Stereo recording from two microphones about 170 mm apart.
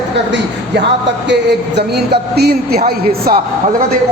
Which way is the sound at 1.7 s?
70° right (ahead or behind).